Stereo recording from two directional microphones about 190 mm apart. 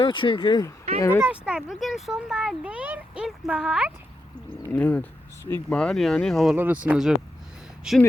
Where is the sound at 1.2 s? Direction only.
5° right (ahead or behind).